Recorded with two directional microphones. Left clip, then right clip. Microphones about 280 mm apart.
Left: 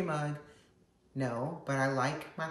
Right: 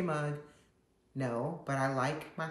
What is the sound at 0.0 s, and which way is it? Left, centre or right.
Speech, centre.